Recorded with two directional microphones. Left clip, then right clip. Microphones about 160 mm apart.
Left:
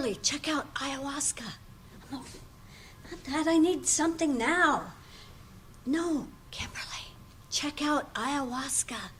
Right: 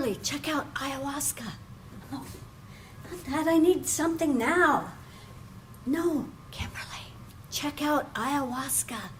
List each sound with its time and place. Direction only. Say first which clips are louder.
0.0 s a woman's voice: even; 40° right (ahead or behind)
3.2 s a woman's voice: right 2 dB; 30° right (ahead or behind)
5.9 s a woman's voice: right 2 dB; 30° right (ahead or behind)